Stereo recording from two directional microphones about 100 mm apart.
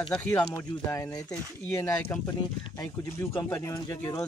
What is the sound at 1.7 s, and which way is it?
Speech, 25° left (ahead or behind).